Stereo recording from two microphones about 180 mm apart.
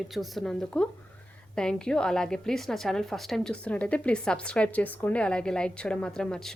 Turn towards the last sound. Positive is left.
turn(degrees=5)  # may be behind; listen again after turning